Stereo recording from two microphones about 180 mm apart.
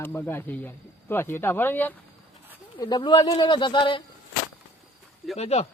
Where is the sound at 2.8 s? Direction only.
25° left (ahead or behind).